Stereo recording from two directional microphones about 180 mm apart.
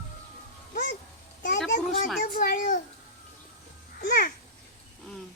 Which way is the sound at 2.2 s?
55° left (ahead or behind).